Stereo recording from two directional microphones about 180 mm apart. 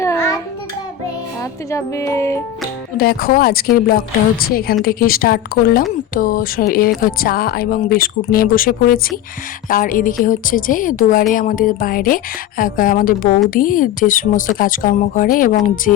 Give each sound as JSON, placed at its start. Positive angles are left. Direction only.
{"t": 0.0, "sound": "child singing", "side_deg": 15}
{"t": 1.4, "sound": "speech", "side_deg": 15}
{"t": 3.0, "sound": "a woman's voice", "side_deg": 55}